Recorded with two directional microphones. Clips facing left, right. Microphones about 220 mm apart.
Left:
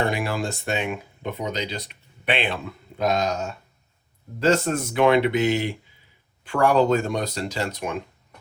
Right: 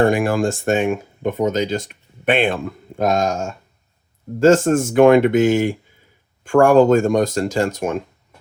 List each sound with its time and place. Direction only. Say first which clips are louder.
0.0 s speech: right 9 dB; 50° right (ahead or behind)